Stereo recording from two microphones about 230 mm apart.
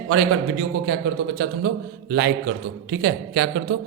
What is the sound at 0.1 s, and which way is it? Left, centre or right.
A man's voice, right.